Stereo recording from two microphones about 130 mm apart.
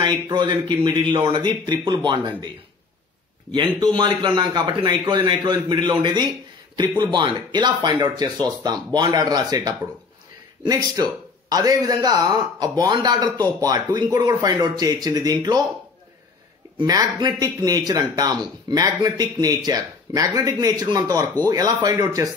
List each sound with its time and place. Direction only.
0.0 s a man's voice: 35° right (ahead or behind)
3.5 s a man's voice: 35° right (ahead or behind)
16.7 s a man's voice: 30° right (ahead or behind)